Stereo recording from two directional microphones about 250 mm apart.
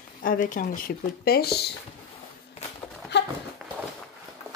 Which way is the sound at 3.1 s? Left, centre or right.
Left.